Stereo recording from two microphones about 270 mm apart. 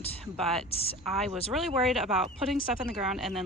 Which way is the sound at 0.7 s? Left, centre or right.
Left.